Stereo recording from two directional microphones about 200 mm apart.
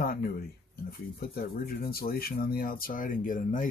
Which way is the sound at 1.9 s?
50° left (ahead or behind).